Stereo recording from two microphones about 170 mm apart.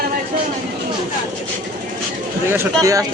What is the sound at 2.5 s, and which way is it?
Speech, 20° right (ahead or behind).